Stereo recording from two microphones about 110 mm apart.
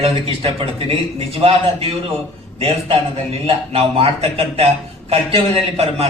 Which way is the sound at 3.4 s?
60° right (ahead or behind).